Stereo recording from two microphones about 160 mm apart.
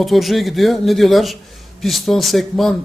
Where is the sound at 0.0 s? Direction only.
Centre (ahead or behind).